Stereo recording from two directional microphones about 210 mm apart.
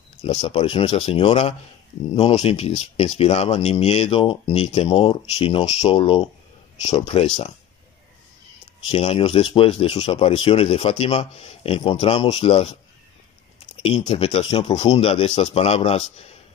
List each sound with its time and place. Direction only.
0.2 s speech: 30° left (ahead or behind)
8.8 s speech: 30° left (ahead or behind)
13.8 s speech: 30° left (ahead or behind)